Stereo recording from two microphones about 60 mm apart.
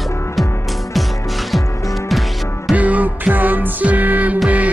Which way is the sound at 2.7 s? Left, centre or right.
Right.